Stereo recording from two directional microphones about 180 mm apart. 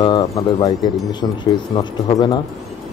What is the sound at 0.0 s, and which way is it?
Speech, 25° left (ahead or behind).